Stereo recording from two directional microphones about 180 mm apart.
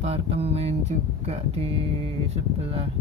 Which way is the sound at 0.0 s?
35° right (ahead or behind).